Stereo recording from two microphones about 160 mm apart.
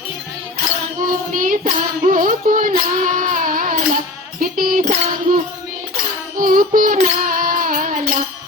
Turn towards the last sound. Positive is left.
turn(degrees=-60)  # may be behind; listen again after turning